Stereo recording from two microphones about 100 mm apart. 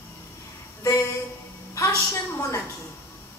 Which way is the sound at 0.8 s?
30° left (ahead or behind).